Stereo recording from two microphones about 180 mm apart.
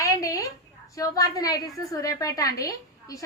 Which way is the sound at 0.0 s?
20° left (ahead or behind).